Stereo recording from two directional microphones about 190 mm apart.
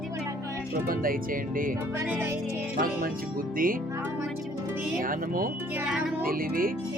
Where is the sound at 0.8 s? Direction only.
50° right (ahead or behind).